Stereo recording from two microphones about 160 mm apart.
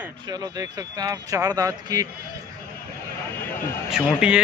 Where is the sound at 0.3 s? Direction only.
25° right (ahead or behind).